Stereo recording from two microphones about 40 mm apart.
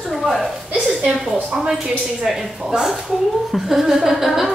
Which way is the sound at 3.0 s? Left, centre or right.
Centre.